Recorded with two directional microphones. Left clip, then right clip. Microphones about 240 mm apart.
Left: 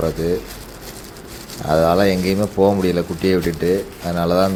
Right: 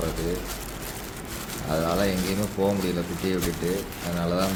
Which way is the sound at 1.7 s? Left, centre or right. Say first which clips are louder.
Left 11 dB; left.